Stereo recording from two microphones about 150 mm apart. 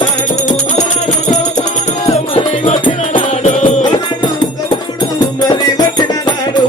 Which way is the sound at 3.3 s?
50° left (ahead or behind).